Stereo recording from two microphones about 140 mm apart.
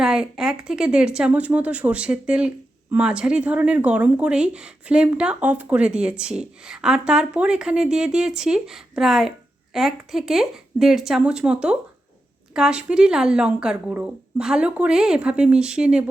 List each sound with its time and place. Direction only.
0.0 s speech: 5° right (ahead or behind)